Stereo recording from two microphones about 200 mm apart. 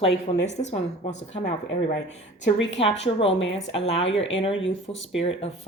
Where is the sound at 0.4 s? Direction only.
35° left (ahead or behind).